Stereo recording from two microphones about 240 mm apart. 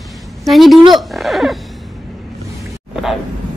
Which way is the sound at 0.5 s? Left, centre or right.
Centre.